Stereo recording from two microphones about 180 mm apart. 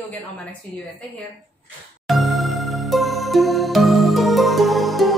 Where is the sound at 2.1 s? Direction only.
Centre (ahead or behind).